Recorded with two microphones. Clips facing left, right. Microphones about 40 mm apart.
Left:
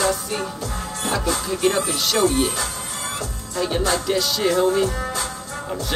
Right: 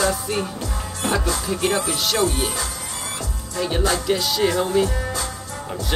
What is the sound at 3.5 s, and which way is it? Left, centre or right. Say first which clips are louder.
Music: even; centre.